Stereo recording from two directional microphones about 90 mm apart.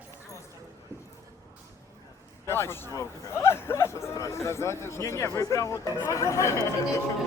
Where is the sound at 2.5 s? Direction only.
30° left (ahead or behind).